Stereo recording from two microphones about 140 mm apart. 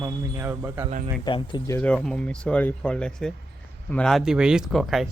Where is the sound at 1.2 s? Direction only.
35° left (ahead or behind).